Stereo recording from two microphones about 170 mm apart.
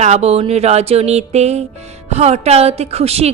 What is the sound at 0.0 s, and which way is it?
A woman's voice, 40° right (ahead or behind).